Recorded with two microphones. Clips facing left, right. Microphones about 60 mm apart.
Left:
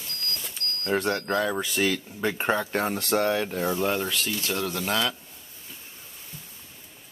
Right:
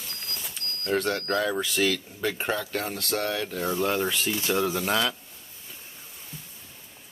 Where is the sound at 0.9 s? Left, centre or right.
Centre; by 3.6 s left.